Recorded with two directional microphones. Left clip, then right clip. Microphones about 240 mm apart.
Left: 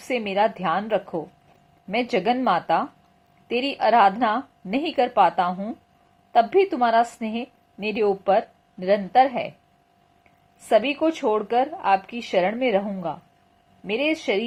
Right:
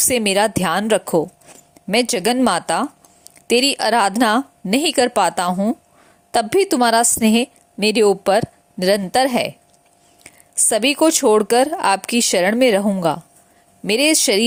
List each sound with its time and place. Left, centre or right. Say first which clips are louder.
0.1 s a woman's voice: right 3 dB; right